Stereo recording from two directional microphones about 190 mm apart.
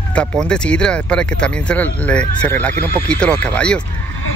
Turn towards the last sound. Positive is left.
turn(degrees=5)  # may be behind; listen again after turning